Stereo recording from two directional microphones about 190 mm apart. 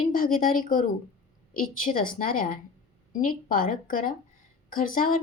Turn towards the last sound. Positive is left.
turn(degrees=45)  # may be behind; listen again after turning